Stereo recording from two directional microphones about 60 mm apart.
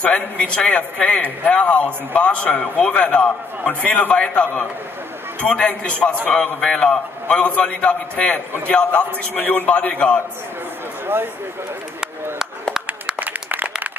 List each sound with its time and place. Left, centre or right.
0.0 s a man's voice: centre
9.3 s a man's voice: left
13.2 s a sound: right